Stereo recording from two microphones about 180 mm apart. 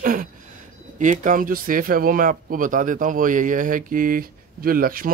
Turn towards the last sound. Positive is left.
turn(degrees=-50)  # may be behind; listen again after turning